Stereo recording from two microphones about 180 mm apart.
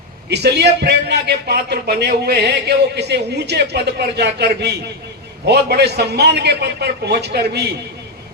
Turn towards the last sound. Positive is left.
turn(degrees=-65)  # may be behind; listen again after turning